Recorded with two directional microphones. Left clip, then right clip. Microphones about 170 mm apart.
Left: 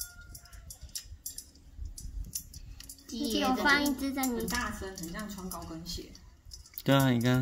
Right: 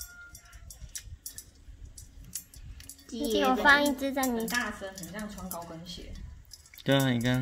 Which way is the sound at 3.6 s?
40° right (ahead or behind).